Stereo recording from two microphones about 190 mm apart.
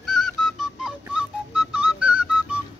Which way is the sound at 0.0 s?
Centre (ahead or behind).